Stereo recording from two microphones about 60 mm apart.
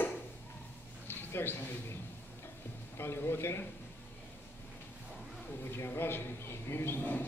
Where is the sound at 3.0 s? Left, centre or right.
Left.